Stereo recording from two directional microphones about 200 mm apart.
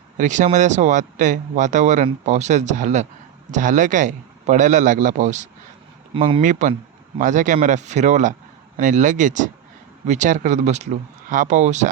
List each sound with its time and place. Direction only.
0.2 s a man's voice: 40° right (ahead or behind)
6.4 s a man's voice: 40° right (ahead or behind)